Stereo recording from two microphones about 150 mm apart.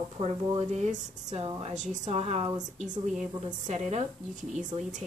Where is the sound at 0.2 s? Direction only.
45° right (ahead or behind).